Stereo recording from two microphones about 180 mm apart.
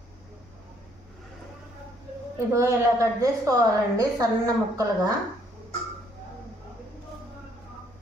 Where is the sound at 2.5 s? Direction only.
15° right (ahead or behind).